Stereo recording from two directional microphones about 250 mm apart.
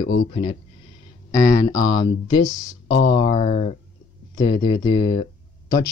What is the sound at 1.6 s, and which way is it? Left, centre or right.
Speech, centre.